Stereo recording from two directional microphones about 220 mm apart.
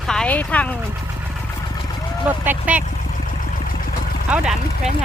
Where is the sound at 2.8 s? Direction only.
35° left (ahead or behind).